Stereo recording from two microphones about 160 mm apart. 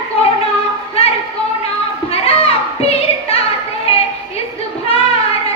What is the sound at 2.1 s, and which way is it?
Music, 40° left (ahead or behind).